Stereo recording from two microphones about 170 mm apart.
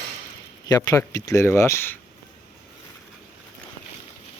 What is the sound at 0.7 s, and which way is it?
Speech, 20° left (ahead or behind).